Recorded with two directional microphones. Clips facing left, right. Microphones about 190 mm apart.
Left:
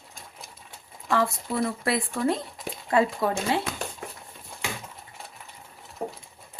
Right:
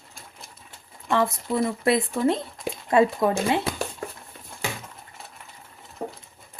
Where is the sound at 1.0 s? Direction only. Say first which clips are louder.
Right 2 dB; 20° right (ahead or behind).